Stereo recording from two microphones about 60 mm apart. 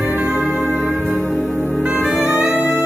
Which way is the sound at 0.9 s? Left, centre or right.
Right.